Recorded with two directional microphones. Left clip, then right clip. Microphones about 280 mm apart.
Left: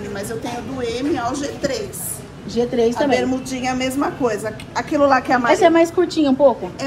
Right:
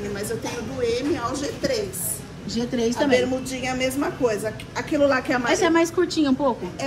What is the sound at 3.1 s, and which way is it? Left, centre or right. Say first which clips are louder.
A woman's voice: left 2 dB; centre.